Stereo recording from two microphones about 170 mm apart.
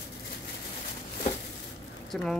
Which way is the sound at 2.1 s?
5° left (ahead or behind).